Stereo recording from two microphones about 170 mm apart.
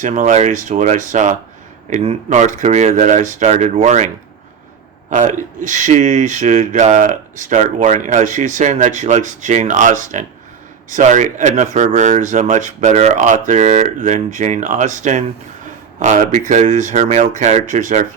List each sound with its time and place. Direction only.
0.0 s speech: 45° right (ahead or behind)
5.1 s speech: 45° right (ahead or behind)